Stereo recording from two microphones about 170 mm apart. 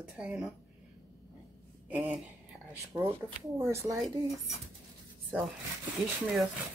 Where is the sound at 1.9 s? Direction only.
5° right (ahead or behind).